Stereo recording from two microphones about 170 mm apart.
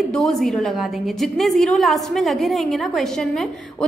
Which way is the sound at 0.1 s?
Centre (ahead or behind).